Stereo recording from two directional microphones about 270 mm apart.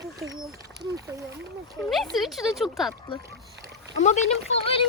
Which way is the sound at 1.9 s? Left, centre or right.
Centre.